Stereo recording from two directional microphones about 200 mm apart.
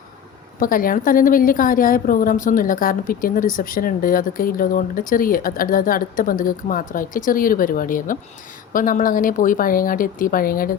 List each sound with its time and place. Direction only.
0.6 s a woman's voice: 45° left (ahead or behind)